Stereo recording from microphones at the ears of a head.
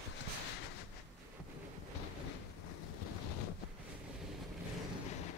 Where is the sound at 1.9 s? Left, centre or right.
Left.